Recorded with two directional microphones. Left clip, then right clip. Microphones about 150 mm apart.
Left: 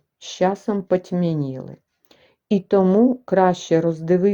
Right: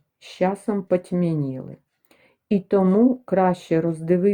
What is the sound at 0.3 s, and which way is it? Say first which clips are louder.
A woman's voice: left 3 dB; 25° left (ahead or behind).